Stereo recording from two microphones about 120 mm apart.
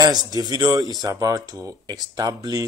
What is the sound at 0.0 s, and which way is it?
Speech, 35° right (ahead or behind).